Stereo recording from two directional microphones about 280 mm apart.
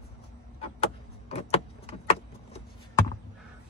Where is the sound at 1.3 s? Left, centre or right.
Left.